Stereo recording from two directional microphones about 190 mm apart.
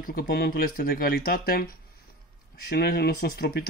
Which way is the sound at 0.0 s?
50° left (ahead or behind).